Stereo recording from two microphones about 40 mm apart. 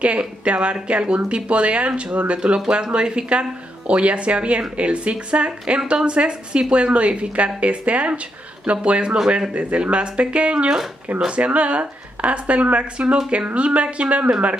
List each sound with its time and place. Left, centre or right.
0.0 s speech: right